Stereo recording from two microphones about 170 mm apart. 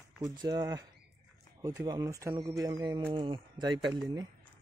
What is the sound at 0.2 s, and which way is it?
Speech, 25° right (ahead or behind).